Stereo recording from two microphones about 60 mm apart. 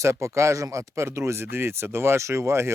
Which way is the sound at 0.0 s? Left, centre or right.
Right.